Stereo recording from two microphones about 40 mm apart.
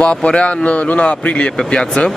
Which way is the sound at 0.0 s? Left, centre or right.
Left.